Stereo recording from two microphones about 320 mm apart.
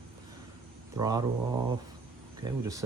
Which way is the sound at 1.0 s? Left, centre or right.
Centre.